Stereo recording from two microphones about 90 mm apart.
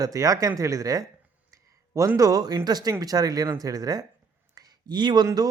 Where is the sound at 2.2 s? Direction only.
40° right (ahead or behind).